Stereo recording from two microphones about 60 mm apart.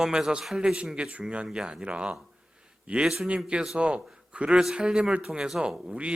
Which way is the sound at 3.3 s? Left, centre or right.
Centre.